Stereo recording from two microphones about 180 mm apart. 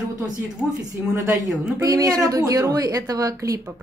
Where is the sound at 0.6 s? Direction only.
5° right (ahead or behind).